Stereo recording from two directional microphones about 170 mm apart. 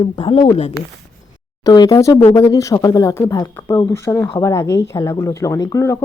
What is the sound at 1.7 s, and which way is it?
Speech, 20° left (ahead or behind).